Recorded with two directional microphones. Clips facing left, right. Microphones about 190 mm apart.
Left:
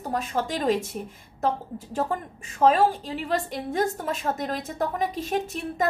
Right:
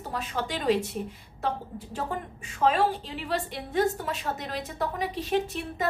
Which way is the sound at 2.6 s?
45° left (ahead or behind).